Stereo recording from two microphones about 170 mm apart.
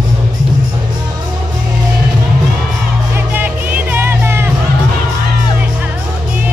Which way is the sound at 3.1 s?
10° right (ahead or behind).